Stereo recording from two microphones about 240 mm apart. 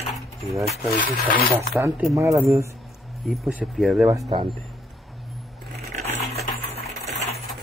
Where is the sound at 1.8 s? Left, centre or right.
Centre.